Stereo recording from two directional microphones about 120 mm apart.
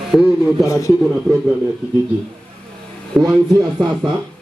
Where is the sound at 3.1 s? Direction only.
Centre (ahead or behind).